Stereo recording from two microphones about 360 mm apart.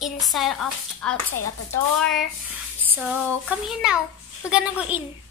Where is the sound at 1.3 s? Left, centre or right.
Left.